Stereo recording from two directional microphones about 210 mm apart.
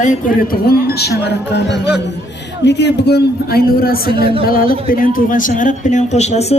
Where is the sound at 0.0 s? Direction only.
40° left (ahead or behind).